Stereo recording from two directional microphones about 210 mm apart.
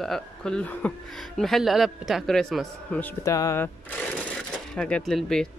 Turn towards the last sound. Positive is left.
turn(degrees=5)  # may be behind; listen again after turning